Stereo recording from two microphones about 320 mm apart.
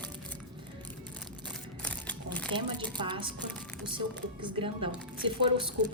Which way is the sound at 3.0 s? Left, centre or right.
Centre.